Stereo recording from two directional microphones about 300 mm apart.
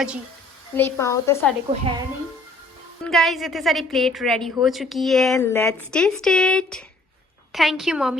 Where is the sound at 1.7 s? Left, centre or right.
Centre.